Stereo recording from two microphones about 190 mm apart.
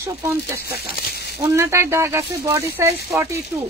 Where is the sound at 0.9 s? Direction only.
55° left (ahead or behind).